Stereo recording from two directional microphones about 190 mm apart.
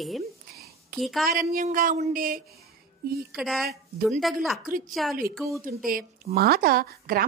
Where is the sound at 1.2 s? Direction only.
50° right (ahead or behind).